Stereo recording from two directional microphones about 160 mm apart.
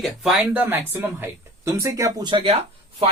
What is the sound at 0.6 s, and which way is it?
Speech, 10° right (ahead or behind).